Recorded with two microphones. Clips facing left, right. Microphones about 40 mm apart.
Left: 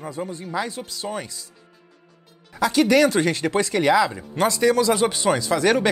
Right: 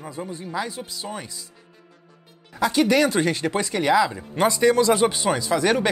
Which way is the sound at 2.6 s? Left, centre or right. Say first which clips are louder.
Left 2 dB; centre.